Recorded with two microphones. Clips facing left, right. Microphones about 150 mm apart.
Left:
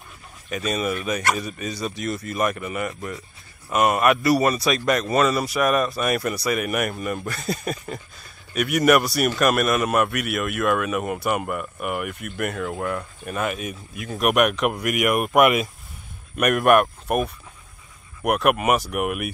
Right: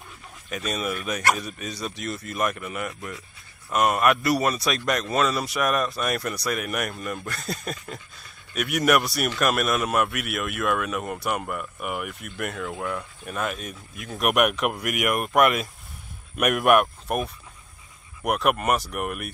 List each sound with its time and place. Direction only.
0.5 s speech: centre (ahead or behind)